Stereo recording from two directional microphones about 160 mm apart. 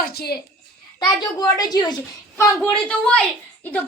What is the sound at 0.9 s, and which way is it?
A woman's voice, 25° left (ahead or behind).